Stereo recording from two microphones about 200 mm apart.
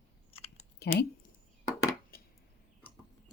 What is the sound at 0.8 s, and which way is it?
Speech, 55° left (ahead or behind).